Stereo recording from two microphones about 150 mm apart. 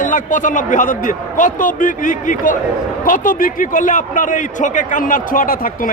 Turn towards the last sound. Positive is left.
turn(degrees=65)  # may be behind; listen again after turning